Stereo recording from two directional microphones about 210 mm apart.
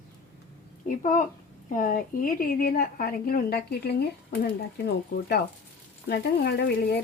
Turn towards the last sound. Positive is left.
turn(degrees=50)  # may be behind; listen again after turning